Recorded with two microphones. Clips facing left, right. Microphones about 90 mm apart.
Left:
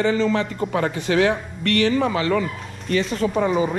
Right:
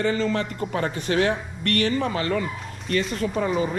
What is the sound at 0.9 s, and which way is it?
Speech, 35° right (ahead or behind).